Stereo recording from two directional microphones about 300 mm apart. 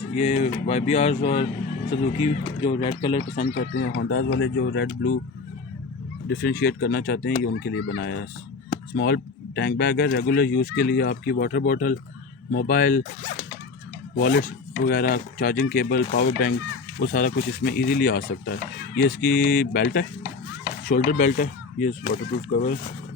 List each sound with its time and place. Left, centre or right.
0.1 s speech: left
3.4 s speech: left
6.2 s speech: left
14.2 s speech: left